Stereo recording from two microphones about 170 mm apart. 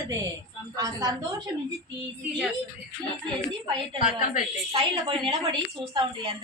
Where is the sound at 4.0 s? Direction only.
50° left (ahead or behind).